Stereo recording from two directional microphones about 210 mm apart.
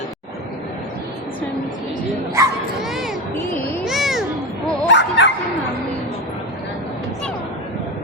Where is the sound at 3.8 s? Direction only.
Centre (ahead or behind).